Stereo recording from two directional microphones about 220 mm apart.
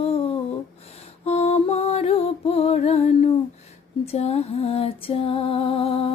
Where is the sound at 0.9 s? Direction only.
30° left (ahead or behind).